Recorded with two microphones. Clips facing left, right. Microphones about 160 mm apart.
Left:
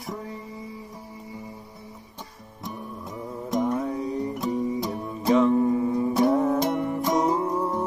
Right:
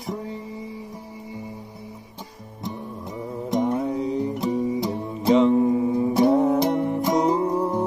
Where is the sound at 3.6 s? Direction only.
25° right (ahead or behind).